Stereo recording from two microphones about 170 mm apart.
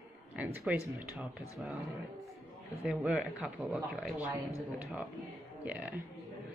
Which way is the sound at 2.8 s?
5° right (ahead or behind).